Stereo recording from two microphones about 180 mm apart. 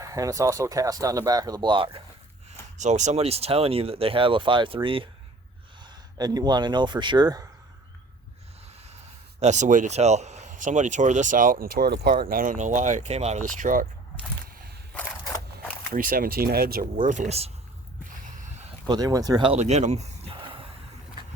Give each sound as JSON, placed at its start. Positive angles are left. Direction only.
{"t": 0.0, "sound": "speech", "side_deg": -20}
{"t": 2.7, "sound": "speech", "side_deg": -40}
{"t": 9.4, "sound": "speech", "side_deg": -40}
{"t": 15.9, "sound": "speech", "side_deg": -50}
{"t": 17.1, "sound": "speech", "side_deg": -40}
{"t": 18.3, "sound": "a sound", "side_deg": -40}
{"t": 18.9, "sound": "speech", "side_deg": -20}